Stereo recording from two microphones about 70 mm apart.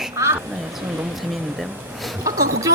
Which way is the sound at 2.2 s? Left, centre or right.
Right.